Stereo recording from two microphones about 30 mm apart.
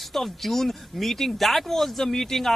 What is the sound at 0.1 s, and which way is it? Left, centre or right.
A man's voice, centre.